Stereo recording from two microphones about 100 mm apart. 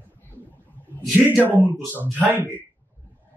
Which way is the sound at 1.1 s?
15° left (ahead or behind).